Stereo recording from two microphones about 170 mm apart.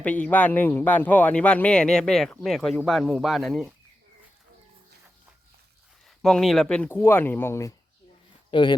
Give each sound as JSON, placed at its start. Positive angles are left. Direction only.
{"t": 0.0, "sound": "speech", "side_deg": 10}
{"t": 6.1, "sound": "speech", "side_deg": 0}
{"t": 8.4, "sound": "speech", "side_deg": 30}